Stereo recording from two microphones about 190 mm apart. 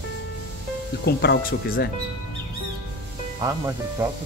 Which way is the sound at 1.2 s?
55° left (ahead or behind).